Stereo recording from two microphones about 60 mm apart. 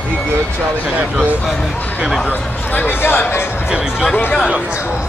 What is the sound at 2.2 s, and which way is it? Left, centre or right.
Speech, left.